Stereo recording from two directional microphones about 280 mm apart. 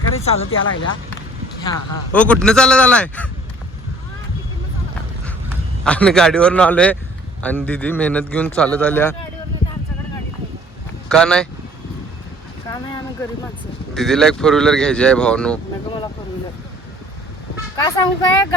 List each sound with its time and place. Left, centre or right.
0.3 s speech: left
1.6 s a man's voice: centre
5.8 s a man's voice: centre
11.1 s a man's voice: centre
13.9 s a man's voice: centre
17.7 s speech: centre